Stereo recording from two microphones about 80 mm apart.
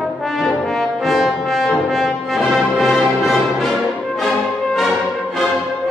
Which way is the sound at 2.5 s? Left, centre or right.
Centre.